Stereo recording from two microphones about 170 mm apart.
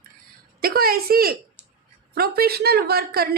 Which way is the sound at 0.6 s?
60° right (ahead or behind).